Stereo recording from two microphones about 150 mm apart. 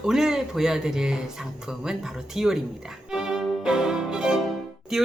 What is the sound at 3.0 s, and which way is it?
Violin, 5° right (ahead or behind).